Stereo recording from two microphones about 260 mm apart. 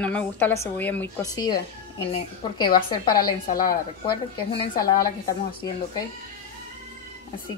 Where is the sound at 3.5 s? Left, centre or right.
Left.